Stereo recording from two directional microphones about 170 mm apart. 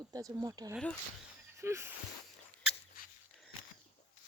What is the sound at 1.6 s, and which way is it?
Female singing, 15° right (ahead or behind).